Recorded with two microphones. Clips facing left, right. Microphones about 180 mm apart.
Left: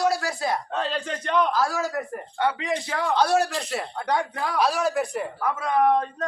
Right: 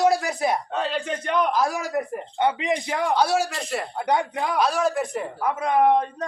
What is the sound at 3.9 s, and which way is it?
Speech, 20° right (ahead or behind).